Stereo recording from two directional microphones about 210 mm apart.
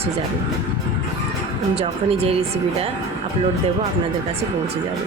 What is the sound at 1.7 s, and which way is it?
Speech, 30° right (ahead or behind).